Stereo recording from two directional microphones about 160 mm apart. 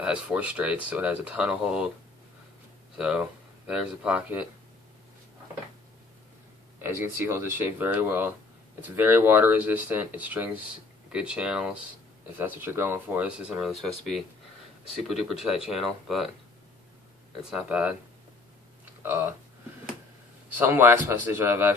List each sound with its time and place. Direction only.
0.0 s speech: 5° right (ahead or behind)
3.0 s speech: 5° right (ahead or behind)
6.8 s speech: 15° right (ahead or behind)
13.7 s speech: centre (ahead or behind)
17.5 s speech: 5° right (ahead or behind)
19.0 s speech: 15° right (ahead or behind)
20.5 s speech: 15° right (ahead or behind)